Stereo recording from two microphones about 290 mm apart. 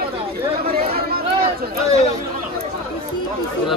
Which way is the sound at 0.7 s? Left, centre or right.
Right.